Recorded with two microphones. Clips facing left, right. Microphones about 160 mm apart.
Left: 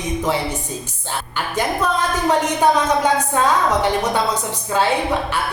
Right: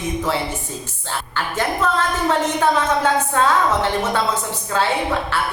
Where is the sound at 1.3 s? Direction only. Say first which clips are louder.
Left 1 dB; 15° left (ahead or behind).